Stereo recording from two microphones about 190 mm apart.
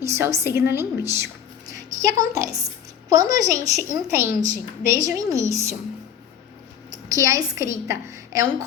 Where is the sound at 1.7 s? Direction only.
20° right (ahead or behind).